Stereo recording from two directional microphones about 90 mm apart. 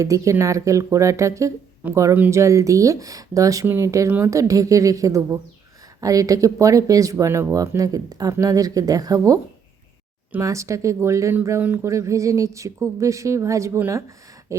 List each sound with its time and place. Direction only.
0.0 s speech: 35° right (ahead or behind)
10.4 s speech: 35° right (ahead or behind)
11.6 s speech: 20° right (ahead or behind)
11.9 s speech: 35° right (ahead or behind)